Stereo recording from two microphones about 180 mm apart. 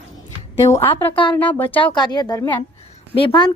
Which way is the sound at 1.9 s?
25° left (ahead or behind).